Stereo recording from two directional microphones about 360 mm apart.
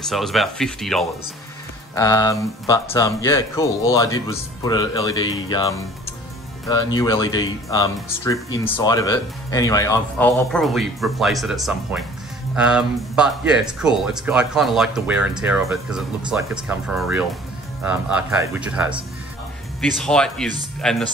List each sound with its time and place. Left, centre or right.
0.0 s speech: centre